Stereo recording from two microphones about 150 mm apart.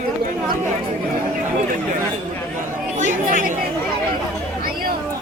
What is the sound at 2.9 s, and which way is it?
Chatter, 55° right (ahead or behind).